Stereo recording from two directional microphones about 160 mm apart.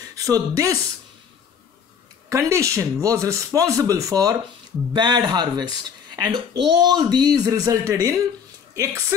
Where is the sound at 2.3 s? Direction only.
20° right (ahead or behind).